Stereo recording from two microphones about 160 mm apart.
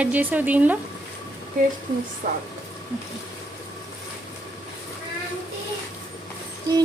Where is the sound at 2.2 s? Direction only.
55° right (ahead or behind).